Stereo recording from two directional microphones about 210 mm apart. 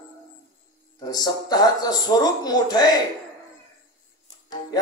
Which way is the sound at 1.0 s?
20° left (ahead or behind).